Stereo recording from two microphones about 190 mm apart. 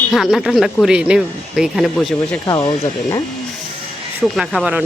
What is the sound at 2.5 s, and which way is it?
Speech, 20° left (ahead or behind).